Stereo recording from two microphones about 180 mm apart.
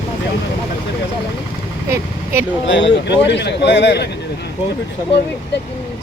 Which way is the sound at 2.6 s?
75° left (ahead or behind).